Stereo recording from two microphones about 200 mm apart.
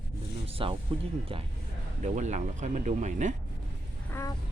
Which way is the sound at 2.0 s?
35° right (ahead or behind).